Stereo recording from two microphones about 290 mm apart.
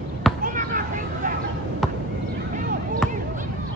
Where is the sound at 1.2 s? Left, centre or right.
Right.